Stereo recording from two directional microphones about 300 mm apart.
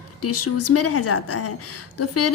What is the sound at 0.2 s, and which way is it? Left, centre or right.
A woman's voice, left.